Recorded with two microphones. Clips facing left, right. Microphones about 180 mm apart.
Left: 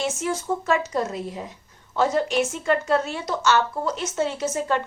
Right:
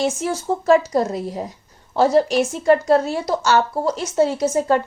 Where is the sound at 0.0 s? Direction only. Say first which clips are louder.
Right 4 dB; 35° right (ahead or behind).